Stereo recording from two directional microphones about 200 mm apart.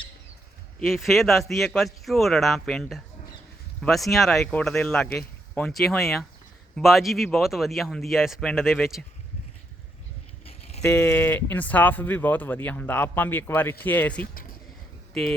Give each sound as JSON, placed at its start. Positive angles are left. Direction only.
{"t": 0.8, "sound": "speech", "side_deg": 0}
{"t": 10.4, "sound": "a sound", "side_deg": 30}
{"t": 10.8, "sound": "speech", "side_deg": 10}